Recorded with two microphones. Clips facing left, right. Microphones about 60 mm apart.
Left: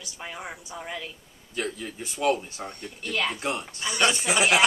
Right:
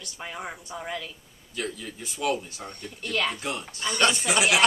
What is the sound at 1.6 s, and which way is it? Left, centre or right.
A man's voice, centre.